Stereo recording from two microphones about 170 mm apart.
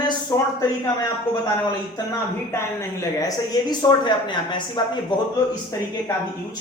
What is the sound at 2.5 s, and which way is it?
Speech, 15° left (ahead or behind).